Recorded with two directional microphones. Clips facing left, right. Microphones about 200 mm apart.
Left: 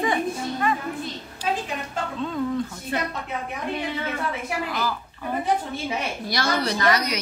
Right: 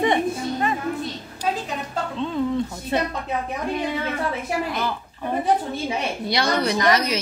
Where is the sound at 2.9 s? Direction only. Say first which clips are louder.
Right 5 dB; 25° right (ahead or behind).